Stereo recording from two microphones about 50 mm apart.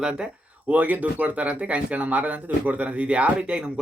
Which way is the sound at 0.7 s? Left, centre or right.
Right.